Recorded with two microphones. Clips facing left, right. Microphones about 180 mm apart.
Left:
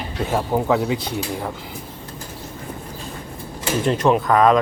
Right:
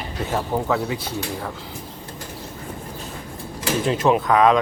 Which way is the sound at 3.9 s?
Centre (ahead or behind).